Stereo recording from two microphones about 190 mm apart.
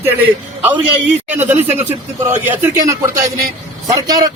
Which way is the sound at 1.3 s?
10° right (ahead or behind).